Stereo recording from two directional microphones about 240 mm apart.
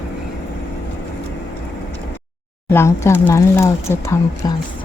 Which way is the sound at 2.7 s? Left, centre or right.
Centre.